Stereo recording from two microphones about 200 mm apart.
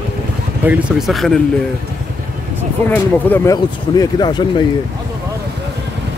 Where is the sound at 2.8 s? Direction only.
10° left (ahead or behind).